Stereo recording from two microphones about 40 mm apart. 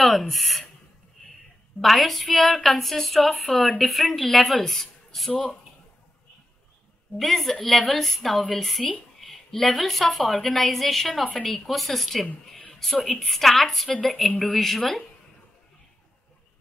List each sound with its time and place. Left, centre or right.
0.0 s a woman's voice: centre
1.8 s a woman's voice: centre
5.3 s speech: left
7.2 s a woman's voice: centre